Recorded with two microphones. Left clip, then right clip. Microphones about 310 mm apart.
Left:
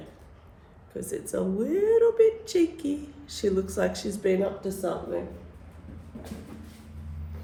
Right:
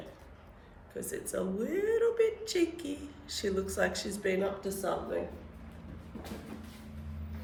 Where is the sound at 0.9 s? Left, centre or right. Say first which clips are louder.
Left 5 dB; centre.